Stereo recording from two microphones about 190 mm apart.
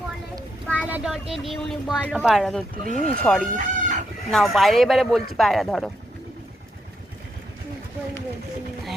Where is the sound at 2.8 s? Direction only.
45° right (ahead or behind).